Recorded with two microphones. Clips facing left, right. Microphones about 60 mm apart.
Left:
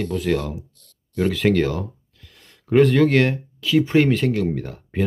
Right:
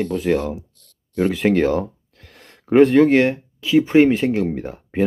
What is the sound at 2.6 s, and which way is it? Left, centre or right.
Speech, right.